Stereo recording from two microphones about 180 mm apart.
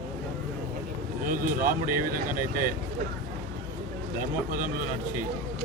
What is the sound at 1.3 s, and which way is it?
Speech, 50° right (ahead or behind).